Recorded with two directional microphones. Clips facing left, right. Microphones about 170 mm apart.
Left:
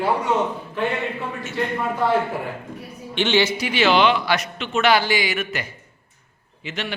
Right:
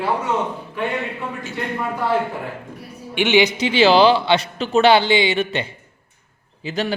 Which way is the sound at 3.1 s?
15° right (ahead or behind).